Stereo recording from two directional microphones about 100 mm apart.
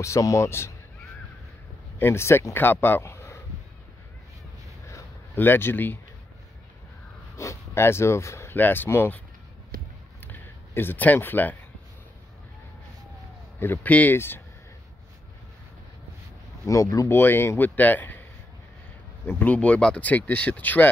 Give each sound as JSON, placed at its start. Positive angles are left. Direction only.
{"t": 0.0, "sound": "a man's voice", "side_deg": 30}
{"t": 2.0, "sound": "speech", "side_deg": 25}
{"t": 4.8, "sound": "a sound", "side_deg": 25}
{"t": 7.3, "sound": "speech", "side_deg": 25}
{"t": 10.2, "sound": "a sound", "side_deg": 20}
{"t": 13.6, "sound": "speech", "side_deg": 20}
{"t": 16.6, "sound": "a man's voice", "side_deg": 35}
{"t": 17.2, "sound": "speech", "side_deg": 25}
{"t": 19.2, "sound": "speech", "side_deg": 15}